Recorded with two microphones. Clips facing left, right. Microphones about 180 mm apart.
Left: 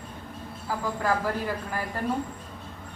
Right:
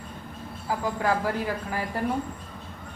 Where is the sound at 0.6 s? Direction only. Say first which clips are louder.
Right 1 dB; 15° right (ahead or behind).